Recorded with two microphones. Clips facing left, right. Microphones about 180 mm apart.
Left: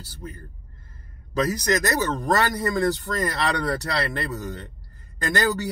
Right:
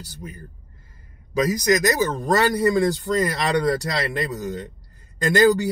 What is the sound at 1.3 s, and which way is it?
Speech, 10° right (ahead or behind).